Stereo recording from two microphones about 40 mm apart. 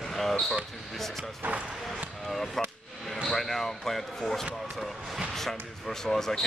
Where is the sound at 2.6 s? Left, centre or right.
Centre.